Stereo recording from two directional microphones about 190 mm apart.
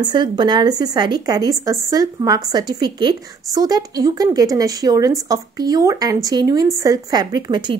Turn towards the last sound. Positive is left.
turn(degrees=-25)  # may be behind; listen again after turning